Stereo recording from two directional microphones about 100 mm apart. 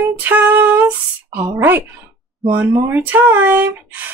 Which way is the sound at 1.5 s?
20° right (ahead or behind).